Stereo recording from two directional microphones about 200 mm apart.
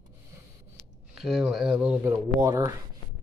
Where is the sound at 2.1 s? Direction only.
15° right (ahead or behind).